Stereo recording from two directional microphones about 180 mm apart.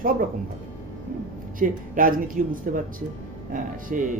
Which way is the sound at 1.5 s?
50° right (ahead or behind).